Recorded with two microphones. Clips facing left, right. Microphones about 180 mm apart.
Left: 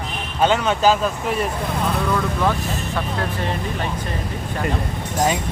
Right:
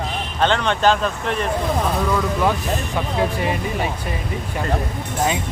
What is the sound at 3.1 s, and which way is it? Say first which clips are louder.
Speech: right 3 dB; 10° right (ahead or behind).